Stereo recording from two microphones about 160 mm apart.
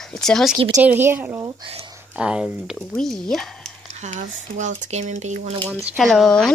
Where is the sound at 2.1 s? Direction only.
5° right (ahead or behind).